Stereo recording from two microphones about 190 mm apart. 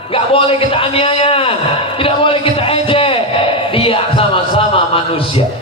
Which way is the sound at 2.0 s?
30° left (ahead or behind).